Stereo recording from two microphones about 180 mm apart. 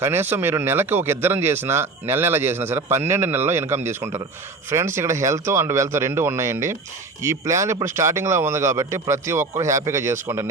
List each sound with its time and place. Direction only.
0.0 s speech: 10° right (ahead or behind)